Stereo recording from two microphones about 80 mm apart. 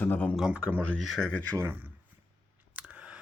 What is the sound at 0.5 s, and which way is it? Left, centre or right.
Speech, centre.